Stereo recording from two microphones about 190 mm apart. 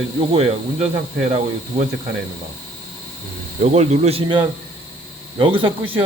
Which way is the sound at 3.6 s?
35° right (ahead or behind).